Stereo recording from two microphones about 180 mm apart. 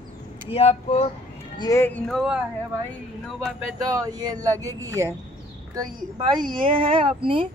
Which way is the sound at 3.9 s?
20° right (ahead or behind).